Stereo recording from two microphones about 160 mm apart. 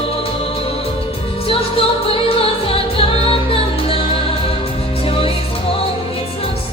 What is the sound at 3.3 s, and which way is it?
Music, 35° left (ahead or behind).